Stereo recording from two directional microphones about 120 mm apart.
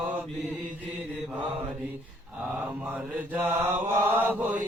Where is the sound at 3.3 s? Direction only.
20° right (ahead or behind).